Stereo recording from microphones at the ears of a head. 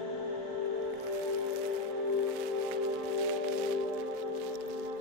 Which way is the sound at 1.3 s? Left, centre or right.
Left.